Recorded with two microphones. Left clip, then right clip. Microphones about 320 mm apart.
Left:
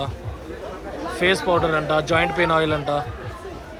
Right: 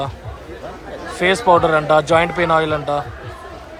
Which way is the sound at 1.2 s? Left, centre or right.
Centre.